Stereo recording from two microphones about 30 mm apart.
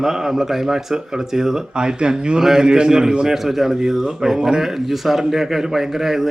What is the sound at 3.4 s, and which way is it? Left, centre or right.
Speech, centre.